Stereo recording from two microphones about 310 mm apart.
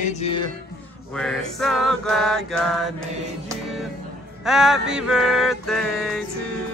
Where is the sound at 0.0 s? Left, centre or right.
Left.